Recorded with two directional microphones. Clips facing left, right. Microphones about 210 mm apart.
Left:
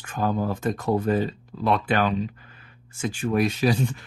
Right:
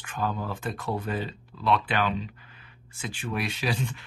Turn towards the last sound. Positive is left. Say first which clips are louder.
# left 7 dB
turn(degrees=40)  # may be behind; listen again after turning